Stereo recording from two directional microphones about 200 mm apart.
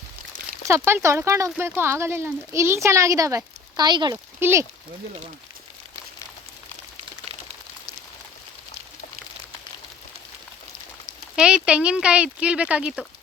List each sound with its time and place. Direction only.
0.7 s speech: 15° right (ahead or behind)
4.4 s speech: 10° right (ahead or behind)
11.3 s speech: 5° right (ahead or behind)